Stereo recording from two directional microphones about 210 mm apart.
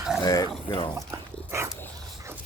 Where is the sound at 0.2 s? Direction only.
20° left (ahead or behind).